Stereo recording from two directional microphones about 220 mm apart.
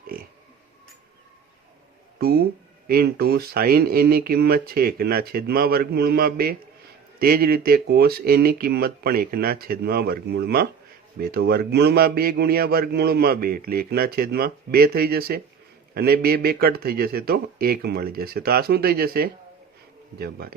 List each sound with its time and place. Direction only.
2.1 s speech: 45° right (ahead or behind)